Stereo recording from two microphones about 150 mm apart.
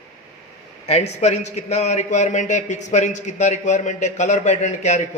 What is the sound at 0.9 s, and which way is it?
A man's voice, 45° left (ahead or behind).